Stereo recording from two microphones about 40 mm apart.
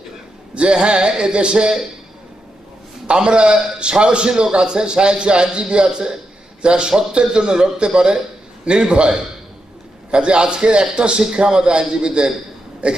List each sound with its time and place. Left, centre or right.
0.6 s a man's voice: right
3.1 s a man's voice: right